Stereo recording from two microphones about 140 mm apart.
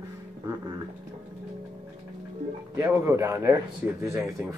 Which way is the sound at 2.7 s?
20° right (ahead or behind).